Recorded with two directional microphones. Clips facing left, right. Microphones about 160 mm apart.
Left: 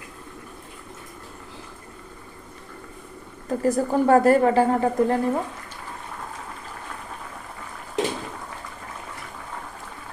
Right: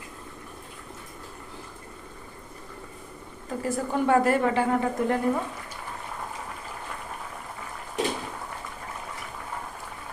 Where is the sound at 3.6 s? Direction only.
40° left (ahead or behind).